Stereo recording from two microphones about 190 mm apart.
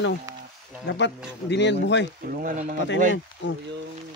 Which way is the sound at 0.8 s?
70° left (ahead or behind).